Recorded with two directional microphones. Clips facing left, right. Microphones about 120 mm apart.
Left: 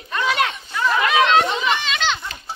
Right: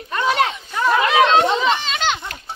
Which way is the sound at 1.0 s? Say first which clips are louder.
Right 1 dB; 25° right (ahead or behind).